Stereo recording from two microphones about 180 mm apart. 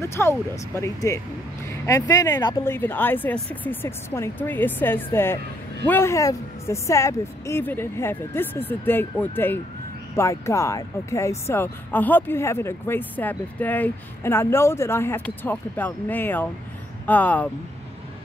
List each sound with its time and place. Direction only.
0.0 s speech: 15° left (ahead or behind)
2.6 s speech: 10° left (ahead or behind)